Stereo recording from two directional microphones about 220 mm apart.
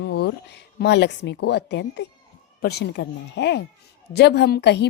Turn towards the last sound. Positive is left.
turn(degrees=50)  # may be behind; listen again after turning